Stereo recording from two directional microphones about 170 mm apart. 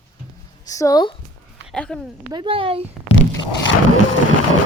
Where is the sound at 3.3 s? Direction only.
90° left.